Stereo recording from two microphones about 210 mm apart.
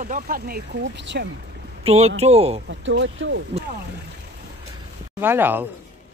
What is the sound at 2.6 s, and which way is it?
Speech, 60° right (ahead or behind).